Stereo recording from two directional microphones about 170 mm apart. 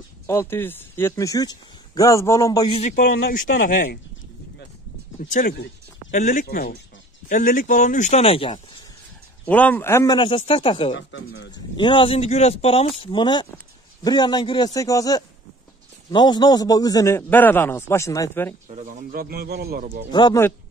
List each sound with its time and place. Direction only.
0.3 s a man's voice: 15° left (ahead or behind)
2.7 s speech: 40° left (ahead or behind)
3.3 s speech: 55° left (ahead or behind)
5.3 s speech: 60° left (ahead or behind); by 8.5 s 35° left (ahead or behind)
9.5 s a man's voice: 10° left (ahead or behind)
10.1 s speech: 30° left (ahead or behind)
11.0 s speech: 90° left
11.7 s a man's voice: 30° left (ahead or behind)
18.7 s speech: 45° right (ahead or behind); by 20.0 s 65° right (ahead or behind)
20.1 s a man's voice: 25° left (ahead or behind)